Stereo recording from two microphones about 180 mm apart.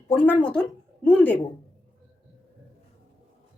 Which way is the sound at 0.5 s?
5° left (ahead or behind).